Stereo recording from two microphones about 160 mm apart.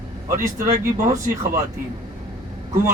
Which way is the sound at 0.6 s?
50° right (ahead or behind).